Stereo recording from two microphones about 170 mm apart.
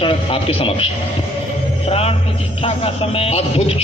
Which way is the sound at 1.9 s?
35° left (ahead or behind).